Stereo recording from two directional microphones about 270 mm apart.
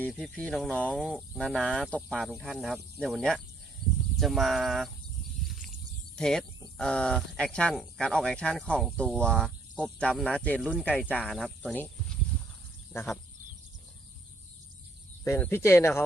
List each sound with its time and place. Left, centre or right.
0.0 s speech: centre
3.8 s a sound: centre
4.2 s speech: centre
5.6 s a sound: centre
6.7 s speech: centre
15.2 s speech: centre